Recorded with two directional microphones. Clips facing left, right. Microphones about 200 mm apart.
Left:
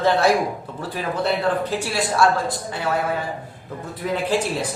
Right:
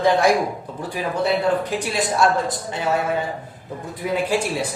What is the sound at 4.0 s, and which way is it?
Speech, 10° right (ahead or behind).